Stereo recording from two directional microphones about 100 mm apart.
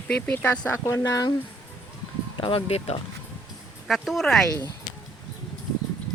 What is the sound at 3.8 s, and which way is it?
Speech, centre (ahead or behind).